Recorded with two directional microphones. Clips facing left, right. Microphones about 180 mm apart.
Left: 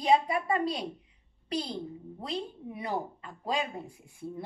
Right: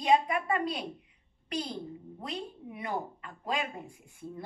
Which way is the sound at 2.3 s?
30° left (ahead or behind).